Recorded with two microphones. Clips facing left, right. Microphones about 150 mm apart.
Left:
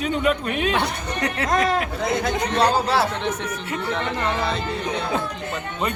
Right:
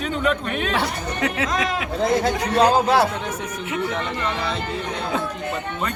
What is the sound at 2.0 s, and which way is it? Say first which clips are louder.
Speech: right 3 dB; 25° right (ahead or behind).